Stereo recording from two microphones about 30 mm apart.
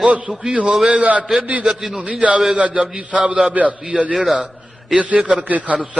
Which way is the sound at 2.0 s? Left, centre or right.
Right.